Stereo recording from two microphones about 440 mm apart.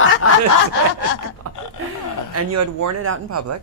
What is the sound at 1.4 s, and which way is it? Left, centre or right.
Speech, right.